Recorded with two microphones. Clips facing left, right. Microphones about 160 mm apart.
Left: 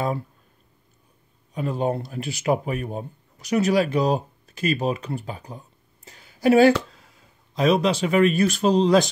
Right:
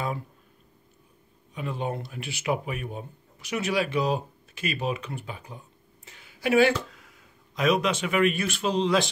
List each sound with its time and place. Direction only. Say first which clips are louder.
1.5 s speech: left 7 dB; 40° left (ahead or behind)
6.0 s a sound: left 8 dB; 40° left (ahead or behind)
7.5 s speech: left 4 dB; 30° left (ahead or behind)